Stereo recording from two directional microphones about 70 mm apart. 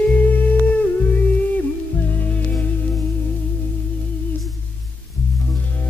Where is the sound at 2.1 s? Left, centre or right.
Left.